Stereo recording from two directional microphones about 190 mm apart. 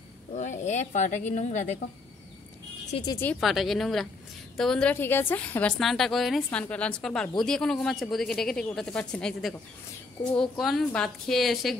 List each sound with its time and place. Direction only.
0.3 s speech: 40° left (ahead or behind)
3.1 s speech: 10° left (ahead or behind)
3.3 s a woman's voice: centre (ahead or behind)
10.6 s a woman's voice: centre (ahead or behind)